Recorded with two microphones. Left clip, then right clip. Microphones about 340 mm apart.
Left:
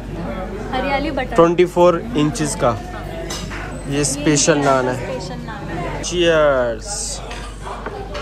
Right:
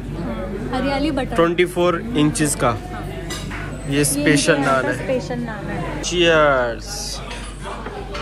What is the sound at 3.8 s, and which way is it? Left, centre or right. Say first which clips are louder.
Speech: right 1 dB; centre.